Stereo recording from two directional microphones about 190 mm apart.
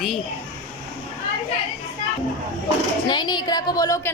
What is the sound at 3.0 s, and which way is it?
A woman's voice, 25° left (ahead or behind).